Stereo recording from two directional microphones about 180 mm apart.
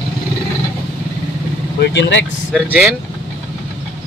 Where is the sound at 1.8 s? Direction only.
75° left (ahead or behind).